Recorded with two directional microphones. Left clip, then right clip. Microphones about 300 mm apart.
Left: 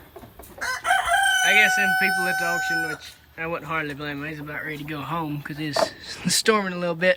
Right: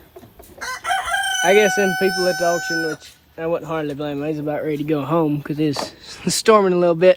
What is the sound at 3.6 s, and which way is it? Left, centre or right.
Speech, centre.